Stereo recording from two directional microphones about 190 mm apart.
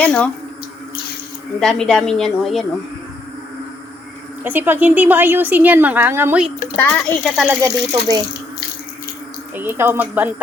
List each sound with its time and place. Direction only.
0.0 s speech: 5° left (ahead or behind)
1.5 s a woman's voice: 5° left (ahead or behind)
4.4 s a woman's voice: 10° right (ahead or behind)
6.7 s a child's voice: 10° left (ahead or behind)
7.6 s a woman's voice: 20° right (ahead or behind)
9.6 s a woman's voice: 10° right (ahead or behind)